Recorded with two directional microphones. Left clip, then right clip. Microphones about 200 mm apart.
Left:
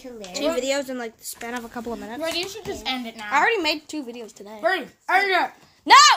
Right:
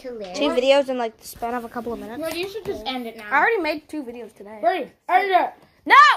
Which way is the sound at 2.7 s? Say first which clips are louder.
Right 1 dB; 55° left (ahead or behind).